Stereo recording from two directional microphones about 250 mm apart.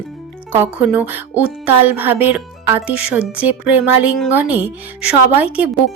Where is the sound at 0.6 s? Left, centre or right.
Centre.